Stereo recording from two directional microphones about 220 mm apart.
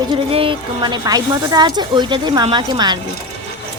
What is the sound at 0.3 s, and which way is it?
A woman's voice, 20° right (ahead or behind).